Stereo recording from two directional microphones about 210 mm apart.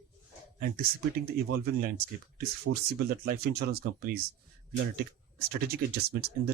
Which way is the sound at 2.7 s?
65° right (ahead or behind).